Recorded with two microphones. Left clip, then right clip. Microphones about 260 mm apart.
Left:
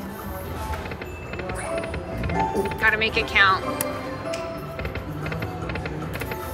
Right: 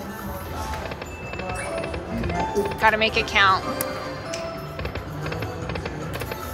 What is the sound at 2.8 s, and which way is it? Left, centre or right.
Speech, centre.